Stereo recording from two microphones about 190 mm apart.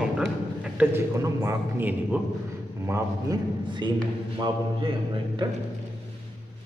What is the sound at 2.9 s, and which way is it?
A man's voice, 20° right (ahead or behind).